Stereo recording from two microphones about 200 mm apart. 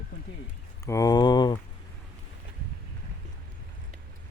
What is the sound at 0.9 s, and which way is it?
Speech, 20° left (ahead or behind).